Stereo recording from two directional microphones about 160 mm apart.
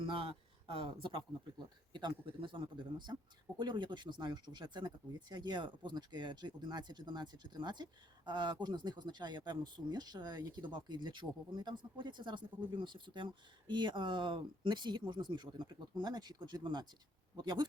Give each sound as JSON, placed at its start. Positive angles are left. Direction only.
{"t": 0.0, "sound": "speech", "side_deg": -35}